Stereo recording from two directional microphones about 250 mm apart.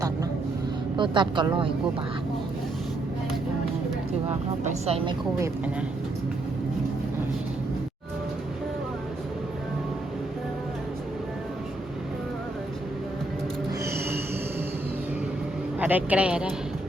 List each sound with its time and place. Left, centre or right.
0.9 s speech: centre
4.9 s speech: right
13.8 s a sound: centre
15.8 s speech: centre